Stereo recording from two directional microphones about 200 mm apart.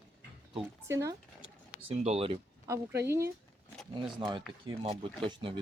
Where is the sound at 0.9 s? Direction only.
15° right (ahead or behind).